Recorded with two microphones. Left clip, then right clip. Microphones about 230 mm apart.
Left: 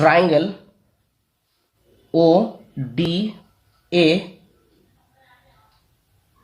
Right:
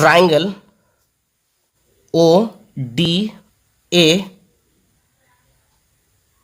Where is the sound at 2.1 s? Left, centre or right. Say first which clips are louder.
Right 3 dB; right.